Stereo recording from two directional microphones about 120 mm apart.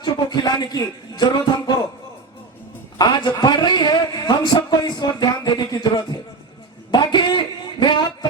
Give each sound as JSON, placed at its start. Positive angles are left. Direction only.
{"t": 0.0, "sound": "a man's voice", "side_deg": 35}
{"t": 3.0, "sound": "a man's voice", "side_deg": 35}
{"t": 6.9, "sound": "a sound", "side_deg": 40}